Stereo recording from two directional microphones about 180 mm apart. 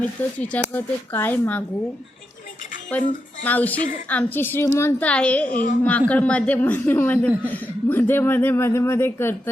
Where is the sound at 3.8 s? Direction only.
50° left (ahead or behind).